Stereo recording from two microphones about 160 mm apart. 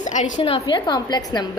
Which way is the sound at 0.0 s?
50° left (ahead or behind).